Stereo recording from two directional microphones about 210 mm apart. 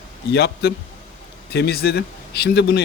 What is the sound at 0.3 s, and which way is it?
Speech, 50° left (ahead or behind).